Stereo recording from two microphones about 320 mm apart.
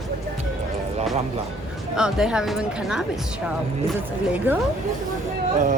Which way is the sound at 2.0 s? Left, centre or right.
Centre.